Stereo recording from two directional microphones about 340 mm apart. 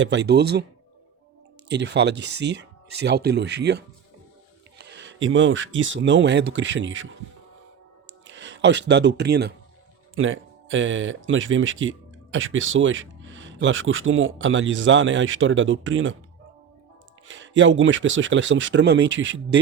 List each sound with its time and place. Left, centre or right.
0.0 s speech: right
1.6 s speech: right
2.1 s speech: right
2.4 s speech: right
8.3 s a sound: right
8.9 s speech: right
17.2 s speech: right